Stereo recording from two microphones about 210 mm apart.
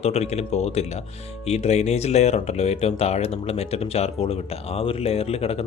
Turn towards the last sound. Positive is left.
turn(degrees=30)  # may be behind; listen again after turning